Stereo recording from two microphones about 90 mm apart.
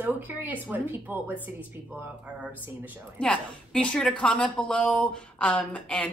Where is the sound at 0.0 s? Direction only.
20° right (ahead or behind).